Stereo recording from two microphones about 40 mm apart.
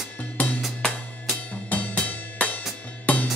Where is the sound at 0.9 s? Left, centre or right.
Left.